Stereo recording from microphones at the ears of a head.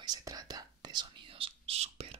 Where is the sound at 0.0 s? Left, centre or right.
Right.